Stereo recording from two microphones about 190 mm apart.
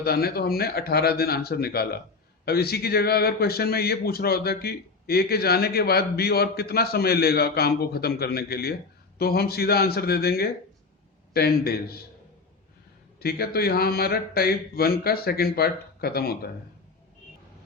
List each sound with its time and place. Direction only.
0.0 s a man's voice: 55° left (ahead or behind)
13.1 s a man's voice: 55° left (ahead or behind)